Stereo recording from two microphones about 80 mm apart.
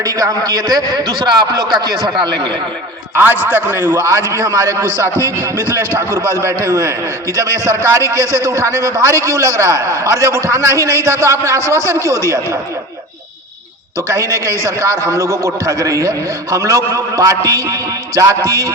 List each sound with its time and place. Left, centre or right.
0.0 s a man's voice: right
2.1 s speech: right
3.5 s a man's voice: right
4.0 s a man's voice: right
14.1 s a man's voice: right